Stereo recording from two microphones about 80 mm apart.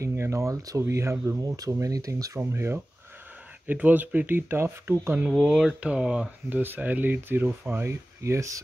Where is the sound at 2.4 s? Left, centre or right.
Right.